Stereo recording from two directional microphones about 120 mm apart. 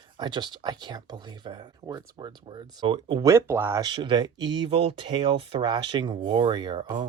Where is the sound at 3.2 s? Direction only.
20° right (ahead or behind).